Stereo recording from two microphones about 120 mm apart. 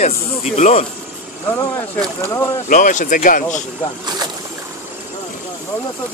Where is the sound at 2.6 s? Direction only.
90° left.